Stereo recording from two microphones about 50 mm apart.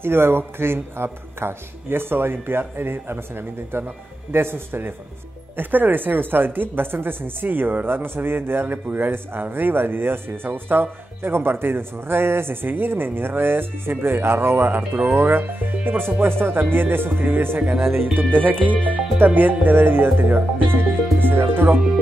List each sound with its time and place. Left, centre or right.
0.0 s a woman's voice: right
5.6 s a woman's voice: right